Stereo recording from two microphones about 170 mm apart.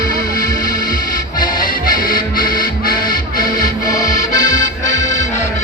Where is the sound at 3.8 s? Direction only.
25° left (ahead or behind).